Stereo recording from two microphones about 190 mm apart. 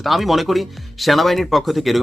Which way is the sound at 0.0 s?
Centre (ahead or behind).